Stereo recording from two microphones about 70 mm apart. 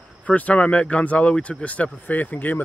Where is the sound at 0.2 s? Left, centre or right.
Centre.